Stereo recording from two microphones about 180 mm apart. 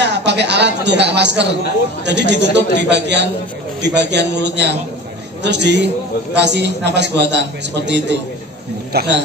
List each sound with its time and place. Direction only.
0.0 s a man's voice: 70° right (ahead or behind)
8.9 s speech: 60° right (ahead or behind)